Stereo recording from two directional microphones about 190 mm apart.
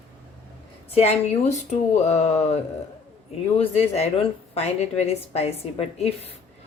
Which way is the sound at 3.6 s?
30° left (ahead or behind).